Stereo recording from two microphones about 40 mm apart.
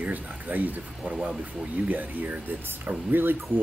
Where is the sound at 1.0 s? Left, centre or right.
Right.